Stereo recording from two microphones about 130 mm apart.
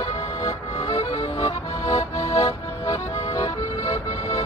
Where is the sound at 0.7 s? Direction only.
55° left (ahead or behind).